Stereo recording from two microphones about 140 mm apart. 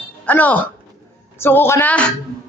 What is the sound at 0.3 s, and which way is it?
A man's voice, 10° left (ahead or behind).